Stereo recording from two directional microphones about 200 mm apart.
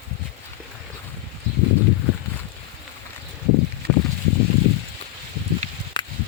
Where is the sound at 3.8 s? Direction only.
50° right (ahead or behind).